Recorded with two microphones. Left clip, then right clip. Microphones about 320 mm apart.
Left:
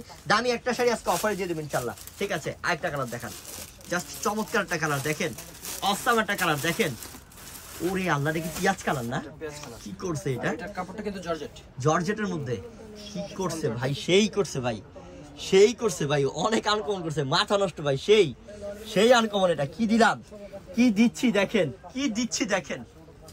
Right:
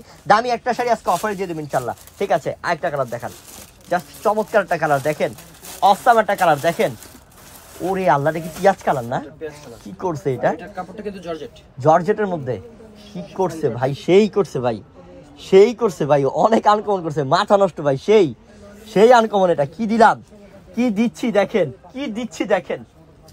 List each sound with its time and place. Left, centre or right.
0.3 s speech: centre
3.9 s a man's voice: centre
4.9 s a man's voice: centre
16.3 s speech: right
17.1 s speech: centre
20.7 s speech: centre